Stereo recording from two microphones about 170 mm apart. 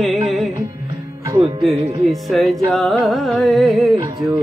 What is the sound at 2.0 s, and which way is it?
Music, centre (ahead or behind).